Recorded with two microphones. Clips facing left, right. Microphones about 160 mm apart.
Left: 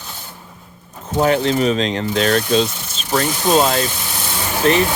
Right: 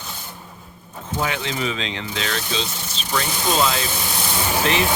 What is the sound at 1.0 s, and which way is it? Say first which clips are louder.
Speech: left 9 dB; 40° left (ahead or behind).